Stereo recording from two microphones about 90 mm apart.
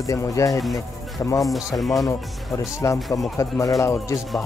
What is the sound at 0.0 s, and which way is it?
Speech, 35° left (ahead or behind).